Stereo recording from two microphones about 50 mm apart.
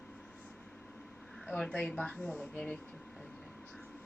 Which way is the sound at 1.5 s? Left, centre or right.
Centre.